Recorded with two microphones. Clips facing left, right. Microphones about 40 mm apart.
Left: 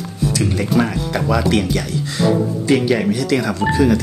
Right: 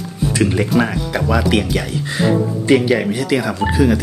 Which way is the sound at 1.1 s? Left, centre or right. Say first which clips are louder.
Right 1 dB; centre.